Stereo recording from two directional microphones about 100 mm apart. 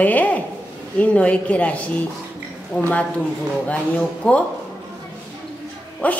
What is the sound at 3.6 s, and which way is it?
Speech, 15° left (ahead or behind).